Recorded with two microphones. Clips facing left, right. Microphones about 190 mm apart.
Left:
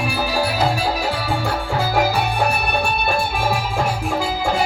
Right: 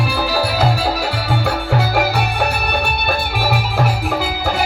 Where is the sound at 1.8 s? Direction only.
70° right (ahead or behind).